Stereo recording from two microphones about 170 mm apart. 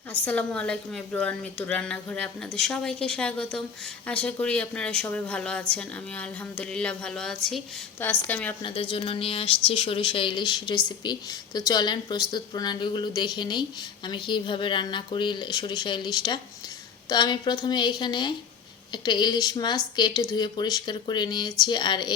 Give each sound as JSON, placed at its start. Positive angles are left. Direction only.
{"t": 0.1, "sound": "a woman's voice", "side_deg": 10}
{"t": 8.6, "sound": "speech", "side_deg": 30}